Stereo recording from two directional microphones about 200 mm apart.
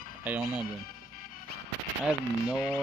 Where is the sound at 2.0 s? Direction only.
Centre (ahead or behind).